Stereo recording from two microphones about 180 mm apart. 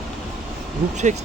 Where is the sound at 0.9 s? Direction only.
40° right (ahead or behind).